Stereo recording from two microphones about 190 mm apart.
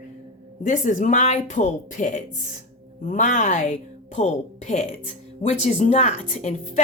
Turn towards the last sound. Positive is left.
turn(degrees=40)  # may be behind; listen again after turning